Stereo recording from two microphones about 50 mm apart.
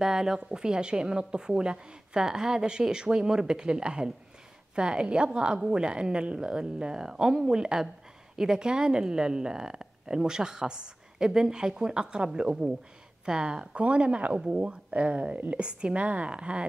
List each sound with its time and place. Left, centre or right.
0.0 s a woman's voice: centre